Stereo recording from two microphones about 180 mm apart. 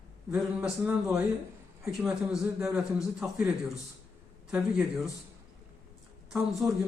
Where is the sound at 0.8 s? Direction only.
5° right (ahead or behind).